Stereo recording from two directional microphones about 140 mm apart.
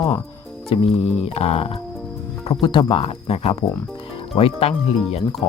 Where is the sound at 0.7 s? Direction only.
45° left (ahead or behind).